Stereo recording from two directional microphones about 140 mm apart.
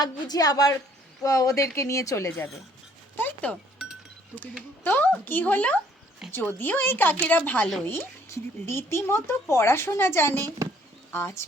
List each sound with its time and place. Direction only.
0.0 s a woman's voice: 25° left (ahead or behind)
3.2 s music: 15° left (ahead or behind)
4.8 s speech: 15° left (ahead or behind)
6.2 s speech: centre (ahead or behind)
6.6 s speech: 15° left (ahead or behind)